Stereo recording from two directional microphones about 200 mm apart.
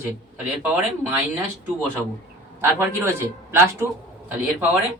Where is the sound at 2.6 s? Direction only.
10° right (ahead or behind).